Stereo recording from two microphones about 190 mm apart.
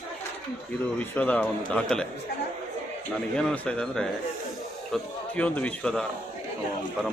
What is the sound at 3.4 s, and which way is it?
Speech, 5° left (ahead or behind).